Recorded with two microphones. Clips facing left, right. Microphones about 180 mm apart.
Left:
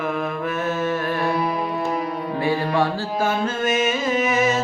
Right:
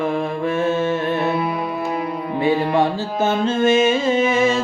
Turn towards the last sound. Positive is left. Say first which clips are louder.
# right 3 dB
turn(degrees=-30)  # may be behind; listen again after turning